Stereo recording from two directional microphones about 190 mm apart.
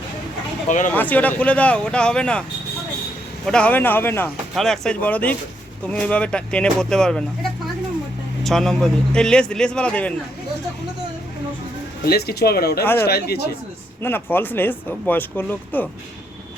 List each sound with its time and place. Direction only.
0.9 s speech: 10° left (ahead or behind)
3.4 s a man's voice: 5° left (ahead or behind)
8.4 s a man's voice: centre (ahead or behind)
12.0 s speech: 55° left (ahead or behind)
12.8 s speech: 10° left (ahead or behind)
13.1 s speech: 55° left (ahead or behind)
14.0 s speech: 10° left (ahead or behind)